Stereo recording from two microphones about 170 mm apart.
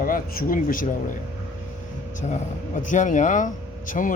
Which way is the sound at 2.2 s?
45° left (ahead or behind).